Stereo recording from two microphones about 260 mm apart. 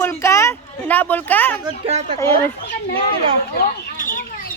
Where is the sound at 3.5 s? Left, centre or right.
Left.